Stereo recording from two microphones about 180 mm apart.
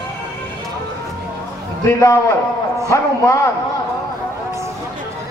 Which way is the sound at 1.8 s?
15° left (ahead or behind).